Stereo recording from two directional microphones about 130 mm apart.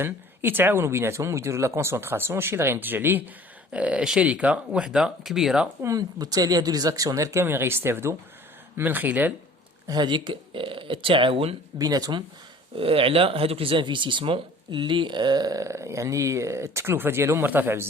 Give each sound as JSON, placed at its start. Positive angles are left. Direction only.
{"t": 0.0, "sound": "speech", "side_deg": -15}
{"t": 5.8, "sound": "speech", "side_deg": -25}
{"t": 9.8, "sound": "speech", "side_deg": -35}
{"t": 11.8, "sound": "speech", "side_deg": -30}
{"t": 12.7, "sound": "speech", "side_deg": -45}